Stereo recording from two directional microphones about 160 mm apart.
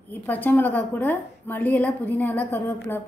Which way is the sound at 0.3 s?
10° left (ahead or behind).